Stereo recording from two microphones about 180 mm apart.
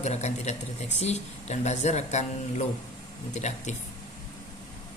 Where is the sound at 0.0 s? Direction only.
40° left (ahead or behind).